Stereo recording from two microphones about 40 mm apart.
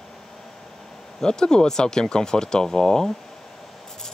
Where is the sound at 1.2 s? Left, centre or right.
Centre.